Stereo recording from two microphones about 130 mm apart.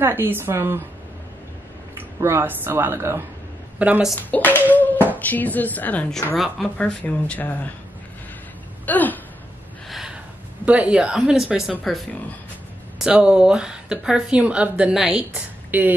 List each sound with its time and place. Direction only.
0.0 s speech: 15° right (ahead or behind)
2.0 s speech: 20° right (ahead or behind)
4.1 s speech: 15° left (ahead or behind)
8.8 s a sound: 15° left (ahead or behind)
9.8 s gasp: centre (ahead or behind)
10.6 s speech: 10° right (ahead or behind)